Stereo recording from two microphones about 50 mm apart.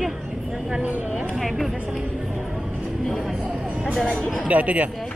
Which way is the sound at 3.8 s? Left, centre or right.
Centre.